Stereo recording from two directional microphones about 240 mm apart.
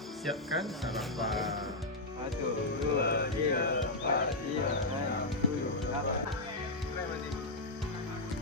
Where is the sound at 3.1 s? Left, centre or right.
Left.